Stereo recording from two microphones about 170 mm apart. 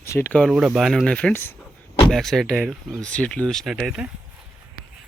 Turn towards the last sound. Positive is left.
turn(degrees=-5)  # may be behind; listen again after turning